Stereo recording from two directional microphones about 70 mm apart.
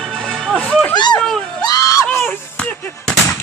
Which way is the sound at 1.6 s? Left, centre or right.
Left.